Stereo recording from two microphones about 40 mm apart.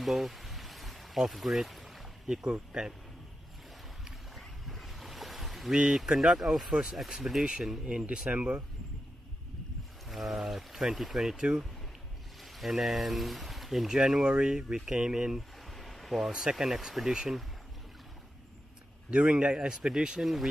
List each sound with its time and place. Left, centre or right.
0.0 s stream: centre
2.2 s speech: right
4.4 s boat: centre
5.7 s speech: centre
6.7 s speech: centre
7.8 s speech: right
8.3 s a man's voice: right
10.0 s speech: centre
15.3 s a sound: centre
16.3 s speech: centre
19.0 s a man's voice: right; by 20.4 s centre